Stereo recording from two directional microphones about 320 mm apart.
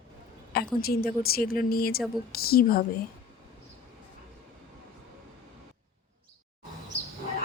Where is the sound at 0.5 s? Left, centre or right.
Left.